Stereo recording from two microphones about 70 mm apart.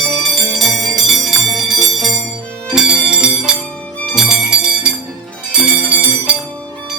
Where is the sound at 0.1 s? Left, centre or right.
Centre.